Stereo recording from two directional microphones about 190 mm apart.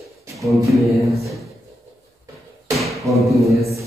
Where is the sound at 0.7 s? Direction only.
Centre (ahead or behind).